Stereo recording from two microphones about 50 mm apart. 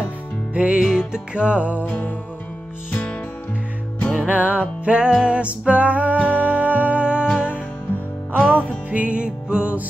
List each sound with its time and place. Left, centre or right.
0.6 s music: centre
1.9 s music: left
4.2 s music: right
8.4 s music: left
9.0 s music: right